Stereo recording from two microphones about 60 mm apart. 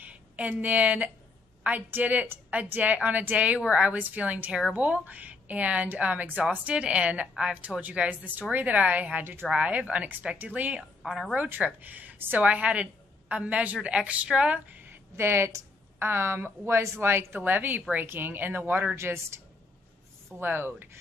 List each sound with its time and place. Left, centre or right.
0.0 s a woman's voice: right
9.5 s a woman's voice: right
11.0 s a woman's voice: centre
11.3 s a woman's voice: right
14.9 s a sound: right
16.0 s a woman's voice: right
17.4 s speech: right
18.9 s a woman's voice: right
20.3 s speech: right